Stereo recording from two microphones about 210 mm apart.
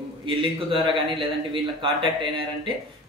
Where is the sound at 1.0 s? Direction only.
25° right (ahead or behind).